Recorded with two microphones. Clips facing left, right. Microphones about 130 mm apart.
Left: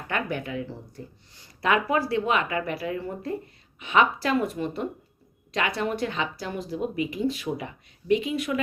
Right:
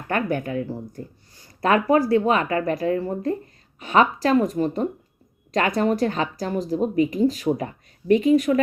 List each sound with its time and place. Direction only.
0.1 s a woman's voice: 45° right (ahead or behind)